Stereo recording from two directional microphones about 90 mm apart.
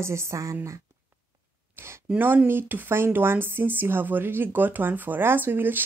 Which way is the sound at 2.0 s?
20° right (ahead or behind).